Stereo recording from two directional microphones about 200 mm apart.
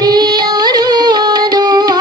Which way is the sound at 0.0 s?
20° right (ahead or behind).